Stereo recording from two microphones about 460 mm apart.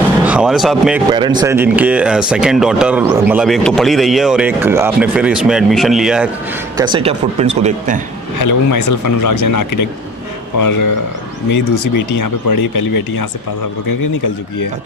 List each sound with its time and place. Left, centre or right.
0.3 s speech: centre
8.4 s speech: left
11.9 s speech: left